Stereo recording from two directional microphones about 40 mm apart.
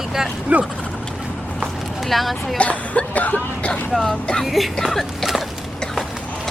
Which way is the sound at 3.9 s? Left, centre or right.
Centre.